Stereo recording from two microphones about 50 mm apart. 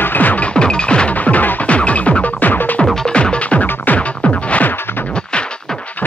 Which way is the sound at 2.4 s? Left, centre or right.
Left.